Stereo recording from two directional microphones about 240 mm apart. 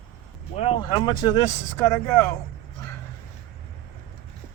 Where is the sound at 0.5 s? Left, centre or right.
Left.